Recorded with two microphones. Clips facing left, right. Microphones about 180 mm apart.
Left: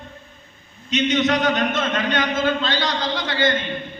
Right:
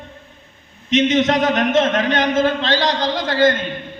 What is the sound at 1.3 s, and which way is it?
Speech, 90° right.